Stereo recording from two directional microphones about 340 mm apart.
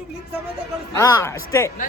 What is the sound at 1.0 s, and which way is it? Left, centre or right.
Speech, centre.